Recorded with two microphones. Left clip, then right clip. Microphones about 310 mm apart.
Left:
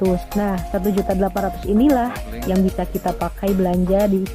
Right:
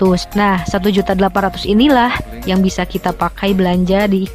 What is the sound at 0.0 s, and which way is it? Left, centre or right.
Speech, right.